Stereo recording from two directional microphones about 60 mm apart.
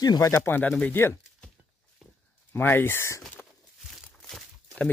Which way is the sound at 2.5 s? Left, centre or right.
Left.